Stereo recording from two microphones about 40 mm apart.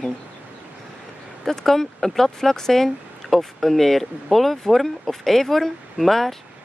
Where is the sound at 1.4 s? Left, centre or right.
Centre.